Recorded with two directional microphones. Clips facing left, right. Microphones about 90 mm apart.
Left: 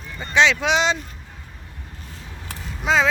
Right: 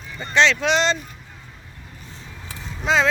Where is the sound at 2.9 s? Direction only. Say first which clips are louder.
Even; 5° left (ahead or behind).